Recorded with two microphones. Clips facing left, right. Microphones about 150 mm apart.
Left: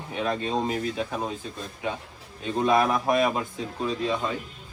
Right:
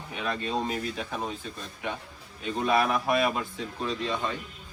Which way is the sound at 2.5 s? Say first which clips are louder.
Left 3 dB; 30° left (ahead or behind).